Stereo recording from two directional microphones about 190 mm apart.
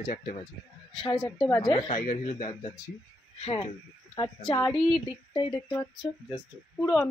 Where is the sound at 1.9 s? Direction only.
45° left (ahead or behind).